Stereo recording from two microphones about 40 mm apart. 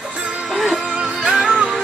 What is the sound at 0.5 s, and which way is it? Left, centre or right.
Music, centre.